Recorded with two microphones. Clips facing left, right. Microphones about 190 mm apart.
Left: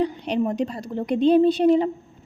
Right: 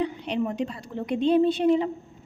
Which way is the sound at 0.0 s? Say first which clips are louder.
Left 4 dB; 40° left (ahead or behind).